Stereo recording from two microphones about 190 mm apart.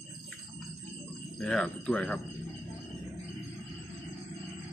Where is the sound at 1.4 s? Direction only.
5° left (ahead or behind).